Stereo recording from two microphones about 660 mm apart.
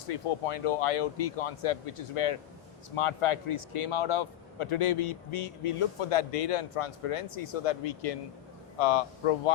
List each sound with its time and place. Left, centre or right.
0.1 s speech: left